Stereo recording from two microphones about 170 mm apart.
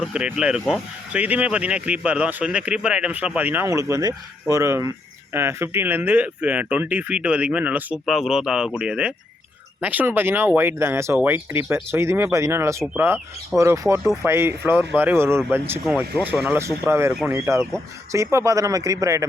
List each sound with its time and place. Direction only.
0.1 s speech: 5° right (ahead or behind)